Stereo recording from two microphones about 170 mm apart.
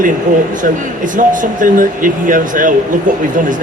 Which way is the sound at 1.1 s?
50° right (ahead or behind).